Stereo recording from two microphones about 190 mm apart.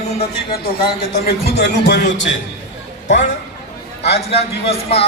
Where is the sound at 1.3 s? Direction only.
60° left (ahead or behind).